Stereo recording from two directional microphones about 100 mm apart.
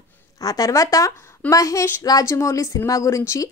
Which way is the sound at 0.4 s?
35° left (ahead or behind).